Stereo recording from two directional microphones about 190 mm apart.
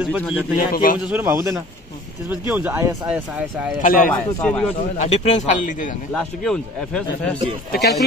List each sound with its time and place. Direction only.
0.0 s a man's voice: 5° right (ahead or behind)
0.6 s a man's voice: 50° left (ahead or behind)
1.0 s speech: 10° right (ahead or behind)
3.8 s a man's voice: 45° left (ahead or behind)
4.1 s a man's voice: 5° left (ahead or behind)
4.9 s speech: 40° left (ahead or behind)
6.1 s a man's voice: 5° left (ahead or behind)
7.7 s speech: 55° left (ahead or behind)